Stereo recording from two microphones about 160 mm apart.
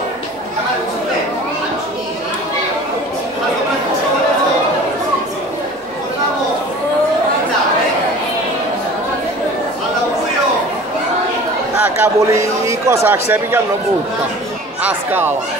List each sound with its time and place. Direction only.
11.8 s a man's voice: 15° right (ahead or behind)
14.8 s speech: 10° right (ahead or behind)